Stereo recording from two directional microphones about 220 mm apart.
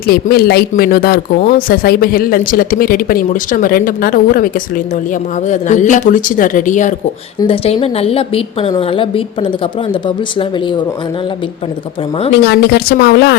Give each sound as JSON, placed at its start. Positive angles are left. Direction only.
{"t": 0.1, "sound": "speech", "side_deg": 45}
{"t": 5.5, "sound": "a woman's voice", "side_deg": 35}
{"t": 12.4, "sound": "a woman's voice", "side_deg": 45}